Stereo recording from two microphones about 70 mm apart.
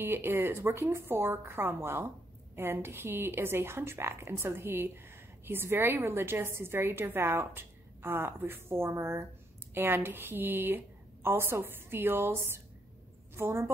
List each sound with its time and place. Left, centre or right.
0.0 s a woman's voice: right
9.8 s a woman's voice: right